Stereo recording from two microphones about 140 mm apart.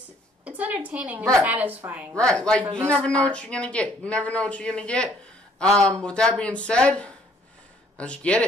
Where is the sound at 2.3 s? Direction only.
5° left (ahead or behind).